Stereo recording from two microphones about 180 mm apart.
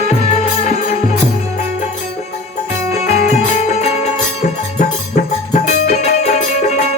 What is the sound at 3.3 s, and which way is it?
Music, 40° left (ahead or behind).